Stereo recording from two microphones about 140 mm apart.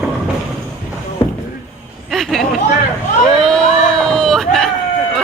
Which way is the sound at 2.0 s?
Centre (ahead or behind).